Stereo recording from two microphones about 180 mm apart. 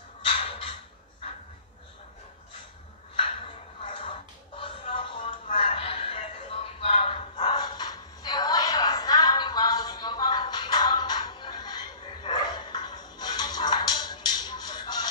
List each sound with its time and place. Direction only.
0.3 s music: 30° left (ahead or behind)
3.8 s a sound: 30° left (ahead or behind)
6.8 s dog: 30° left (ahead or behind)